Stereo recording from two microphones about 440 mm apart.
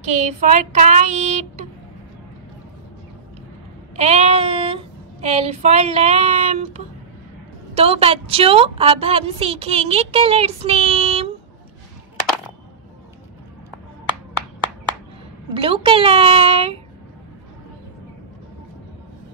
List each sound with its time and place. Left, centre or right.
0.4 s a woman's voice: centre
3.9 s child singing: centre
5.2 s a woman's voice: centre
15.5 s a woman's voice: centre